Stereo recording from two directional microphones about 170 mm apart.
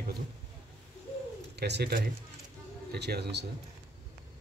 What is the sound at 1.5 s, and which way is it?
Speech, 75° right (ahead or behind).